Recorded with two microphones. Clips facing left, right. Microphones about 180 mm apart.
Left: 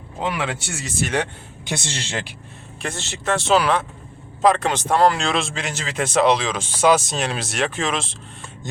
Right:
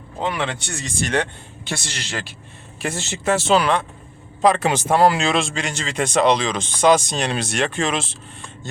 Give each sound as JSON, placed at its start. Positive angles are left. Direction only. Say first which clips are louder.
{"t": 0.2, "sound": "a man's voice", "louder": "right 1 dB", "side_deg": 5}
{"t": 1.7, "sound": "speech", "louder": "left 1 dB", "side_deg": 25}
{"t": 2.8, "sound": "speech", "louder": "right 3 dB", "side_deg": -15}
{"t": 3.3, "sound": "speech", "louder": "even", "side_deg": 0}
{"t": 8.7, "sound": "a man's voice", "louder": "left 2 dB", "side_deg": 20}